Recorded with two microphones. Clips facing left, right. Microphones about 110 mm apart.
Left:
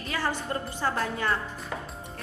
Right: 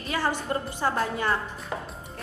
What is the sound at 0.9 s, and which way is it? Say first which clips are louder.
Speech: right 2 dB; 30° right (ahead or behind).